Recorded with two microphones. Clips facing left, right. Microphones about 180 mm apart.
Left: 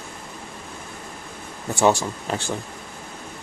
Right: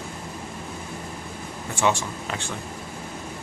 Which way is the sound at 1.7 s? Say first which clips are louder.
Left 5 dB; 40° left (ahead or behind).